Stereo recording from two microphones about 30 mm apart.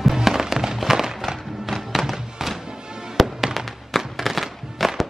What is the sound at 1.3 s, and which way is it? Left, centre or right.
Music, centre.